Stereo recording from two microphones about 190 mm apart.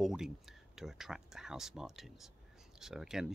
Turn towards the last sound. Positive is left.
turn(degrees=0)  # may be behind; listen again after turning